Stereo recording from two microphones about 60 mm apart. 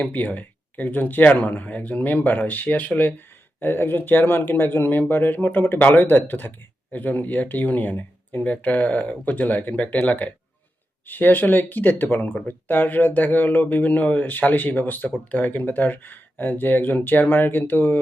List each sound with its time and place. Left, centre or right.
0.0 s speech: left